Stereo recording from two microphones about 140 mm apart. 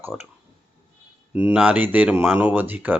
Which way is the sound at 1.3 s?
10° right (ahead or behind).